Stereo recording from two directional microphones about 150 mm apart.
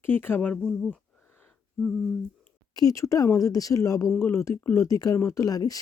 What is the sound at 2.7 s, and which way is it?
Speech, 20° left (ahead or behind).